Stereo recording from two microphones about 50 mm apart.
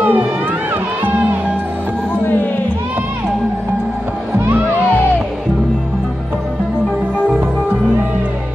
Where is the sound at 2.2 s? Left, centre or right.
Left.